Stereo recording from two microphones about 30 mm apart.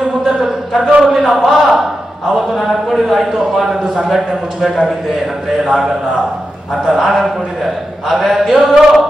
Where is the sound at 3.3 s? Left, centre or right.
Centre.